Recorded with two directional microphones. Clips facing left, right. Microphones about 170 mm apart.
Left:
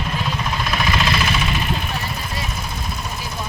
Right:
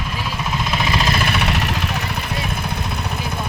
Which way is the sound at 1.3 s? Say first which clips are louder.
Right 1 dB; 70° right (ahead or behind).